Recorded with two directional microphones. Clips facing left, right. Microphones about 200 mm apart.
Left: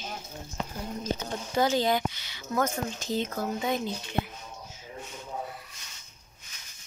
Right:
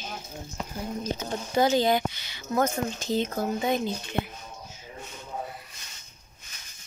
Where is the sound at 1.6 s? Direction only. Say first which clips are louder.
Right 3 dB; 15° right (ahead or behind).